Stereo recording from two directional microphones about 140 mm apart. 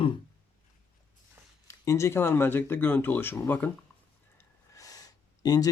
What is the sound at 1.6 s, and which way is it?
Speech, 20° left (ahead or behind).